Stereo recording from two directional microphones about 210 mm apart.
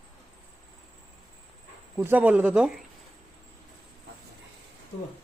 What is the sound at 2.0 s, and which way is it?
Speech, 10° right (ahead or behind).